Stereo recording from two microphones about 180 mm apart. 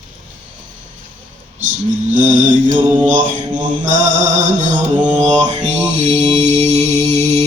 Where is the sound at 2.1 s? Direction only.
45° right (ahead or behind).